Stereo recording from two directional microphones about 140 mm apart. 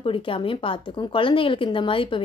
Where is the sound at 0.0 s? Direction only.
40° left (ahead or behind).